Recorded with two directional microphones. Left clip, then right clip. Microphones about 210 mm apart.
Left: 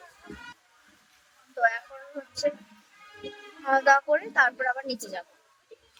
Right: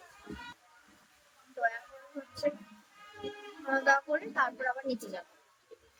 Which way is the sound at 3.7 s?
5° right (ahead or behind).